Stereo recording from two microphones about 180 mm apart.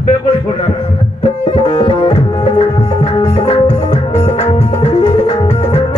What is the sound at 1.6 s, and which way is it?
Tabla, 30° left (ahead or behind).